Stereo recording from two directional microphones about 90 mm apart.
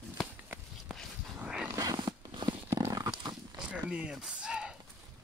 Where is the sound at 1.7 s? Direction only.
45° right (ahead or behind).